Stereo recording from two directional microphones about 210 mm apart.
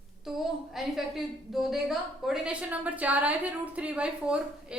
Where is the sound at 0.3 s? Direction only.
Centre (ahead or behind).